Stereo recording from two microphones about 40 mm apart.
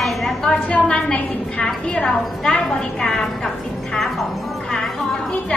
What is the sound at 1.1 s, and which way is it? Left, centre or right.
A woman's voice, left.